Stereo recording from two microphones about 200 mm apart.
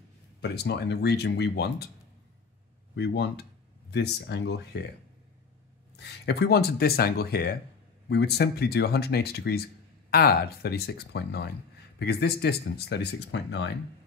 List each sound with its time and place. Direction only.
0.4 s speech: 55° left (ahead or behind)
3.0 s speech: 55° left (ahead or behind)
5.9 s speech: 55° left (ahead or behind)